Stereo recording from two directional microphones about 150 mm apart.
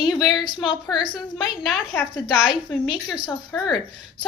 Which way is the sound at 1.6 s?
Centre (ahead or behind).